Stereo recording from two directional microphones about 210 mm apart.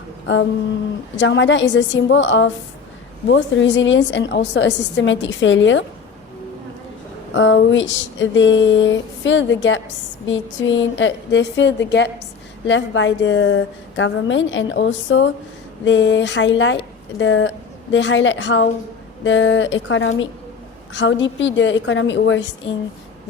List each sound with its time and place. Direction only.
1.1 s a woman's voice: 60° left (ahead or behind)
7.3 s a woman's voice: 60° left (ahead or behind)